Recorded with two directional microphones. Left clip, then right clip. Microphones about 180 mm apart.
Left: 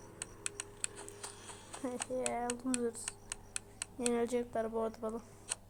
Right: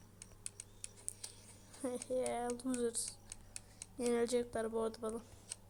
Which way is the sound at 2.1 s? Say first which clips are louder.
Left 1 dB; 5° right (ahead or behind).